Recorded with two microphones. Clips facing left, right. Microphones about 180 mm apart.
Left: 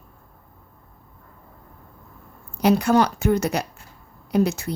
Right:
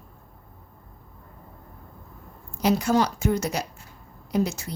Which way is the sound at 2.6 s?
60° left (ahead or behind).